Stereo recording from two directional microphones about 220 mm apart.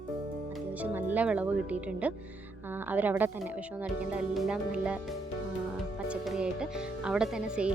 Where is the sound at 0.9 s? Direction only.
5° right (ahead or behind).